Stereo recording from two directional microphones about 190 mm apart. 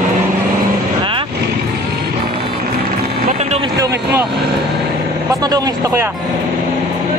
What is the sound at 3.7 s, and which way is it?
Speech, 15° right (ahead or behind).